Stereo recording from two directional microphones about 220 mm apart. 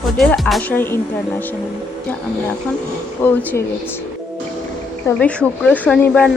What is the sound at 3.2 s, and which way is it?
Speech, 10° left (ahead or behind).